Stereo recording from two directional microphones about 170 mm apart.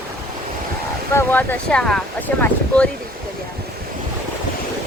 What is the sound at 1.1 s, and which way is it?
Speech, 10° left (ahead or behind).